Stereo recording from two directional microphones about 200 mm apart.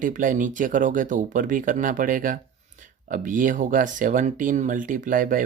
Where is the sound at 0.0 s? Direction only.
40° right (ahead or behind).